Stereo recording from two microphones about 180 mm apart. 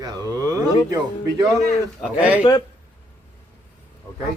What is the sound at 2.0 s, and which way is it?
Speech, 5° right (ahead or behind).